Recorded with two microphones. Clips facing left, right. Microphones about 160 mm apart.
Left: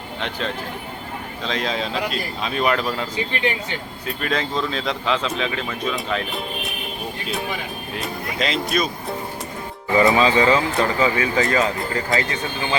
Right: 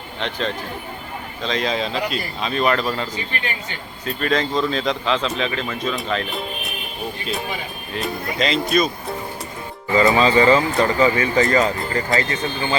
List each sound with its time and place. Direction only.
0.2 s speech: 5° left (ahead or behind)
7.9 s speech: centre (ahead or behind)
10.1 s speech: 5° left (ahead or behind)